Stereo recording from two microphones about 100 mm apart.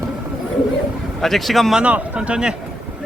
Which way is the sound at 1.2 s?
Centre (ahead or behind).